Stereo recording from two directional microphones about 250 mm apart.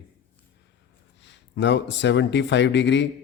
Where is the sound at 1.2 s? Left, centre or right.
Left.